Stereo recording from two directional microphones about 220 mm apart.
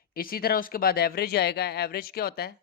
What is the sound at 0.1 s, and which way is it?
Speech, 40° left (ahead or behind).